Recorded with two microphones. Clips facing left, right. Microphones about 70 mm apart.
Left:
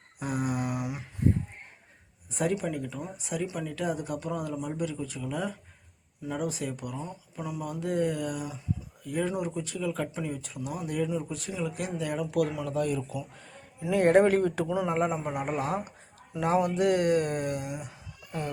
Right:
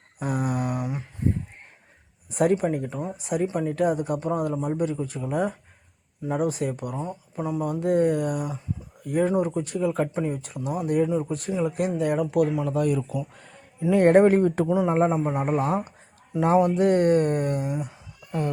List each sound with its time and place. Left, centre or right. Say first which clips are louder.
0.2 s a sound: right 4 dB; right
2.3 s a man's voice: right 7 dB; right
3.8 s a man's voice: right 7 dB; right
12.5 s speech: right 7 dB; right
12.7 s a man's voice: right 5 dB; right